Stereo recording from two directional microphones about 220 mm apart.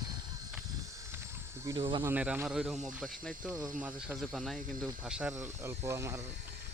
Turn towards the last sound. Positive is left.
turn(degrees=-15)  # may be behind; listen again after turning